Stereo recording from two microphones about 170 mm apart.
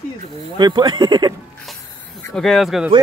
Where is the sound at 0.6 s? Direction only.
25° right (ahead or behind).